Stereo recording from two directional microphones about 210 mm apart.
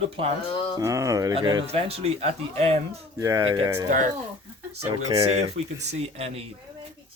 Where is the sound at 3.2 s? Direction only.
15° right (ahead or behind).